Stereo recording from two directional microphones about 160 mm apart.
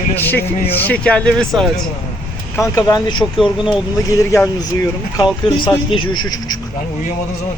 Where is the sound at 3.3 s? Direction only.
Centre (ahead or behind).